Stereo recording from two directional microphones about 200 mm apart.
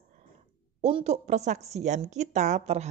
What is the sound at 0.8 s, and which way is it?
A woman's voice, 30° right (ahead or behind).